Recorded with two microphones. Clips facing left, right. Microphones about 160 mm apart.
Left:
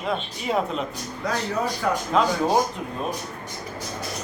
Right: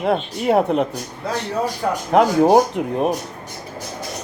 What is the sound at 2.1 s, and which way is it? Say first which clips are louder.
Speech: right 9 dB; 65° right (ahead or behind).